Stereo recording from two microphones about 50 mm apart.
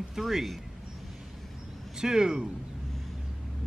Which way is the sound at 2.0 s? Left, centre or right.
Centre.